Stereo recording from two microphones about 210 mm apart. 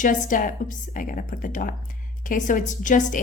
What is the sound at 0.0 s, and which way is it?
A woman's voice, 40° left (ahead or behind).